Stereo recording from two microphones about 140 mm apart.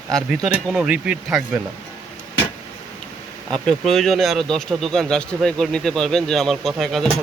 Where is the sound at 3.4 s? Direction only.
5° left (ahead or behind).